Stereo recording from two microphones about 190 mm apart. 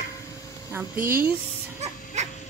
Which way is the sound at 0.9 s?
50° right (ahead or behind).